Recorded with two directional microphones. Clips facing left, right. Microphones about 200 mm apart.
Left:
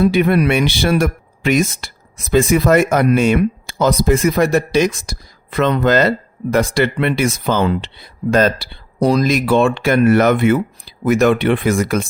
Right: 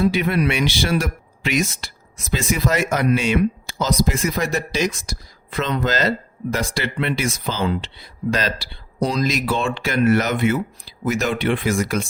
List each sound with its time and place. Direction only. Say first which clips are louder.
0.0 s speech: left 5 dB; 55° left (ahead or behind)